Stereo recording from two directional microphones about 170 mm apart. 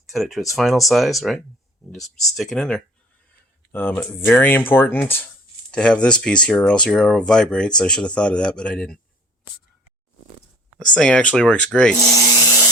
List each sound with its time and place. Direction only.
0.1 s speech: centre (ahead or behind)
10.9 s speech: 5° left (ahead or behind)
12.0 s rub: 20° left (ahead or behind)